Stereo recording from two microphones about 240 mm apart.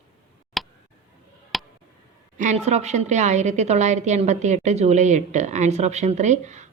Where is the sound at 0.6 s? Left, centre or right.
Centre.